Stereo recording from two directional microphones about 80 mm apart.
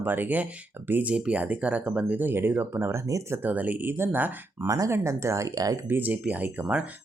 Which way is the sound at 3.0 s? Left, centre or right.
Right.